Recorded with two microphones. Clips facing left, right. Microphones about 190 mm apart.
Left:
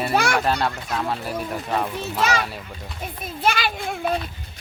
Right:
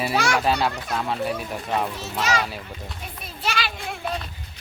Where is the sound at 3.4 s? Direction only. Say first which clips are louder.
Left 5 dB; 50° left (ahead or behind).